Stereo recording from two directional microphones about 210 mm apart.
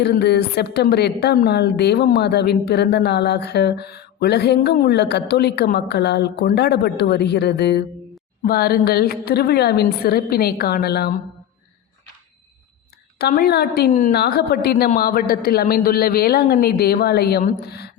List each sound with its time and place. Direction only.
0.0 s a woman's voice: 50° left (ahead or behind)
13.1 s a woman's voice: 45° left (ahead or behind)